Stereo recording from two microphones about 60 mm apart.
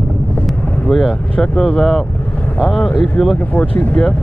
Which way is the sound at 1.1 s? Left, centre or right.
Centre.